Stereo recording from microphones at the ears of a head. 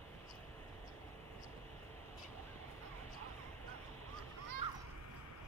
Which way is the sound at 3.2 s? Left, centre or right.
Right.